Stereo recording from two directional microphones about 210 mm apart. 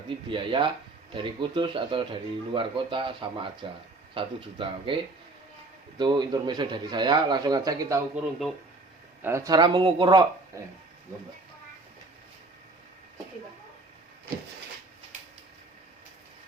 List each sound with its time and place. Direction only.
0.3 s speech: 25° right (ahead or behind)
6.0 s speech: 20° right (ahead or behind)
8.1 s speech: centre (ahead or behind)
9.2 s speech: 15° right (ahead or behind)